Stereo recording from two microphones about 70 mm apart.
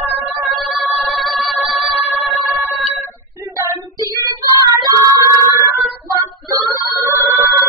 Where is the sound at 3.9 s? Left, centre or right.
Right.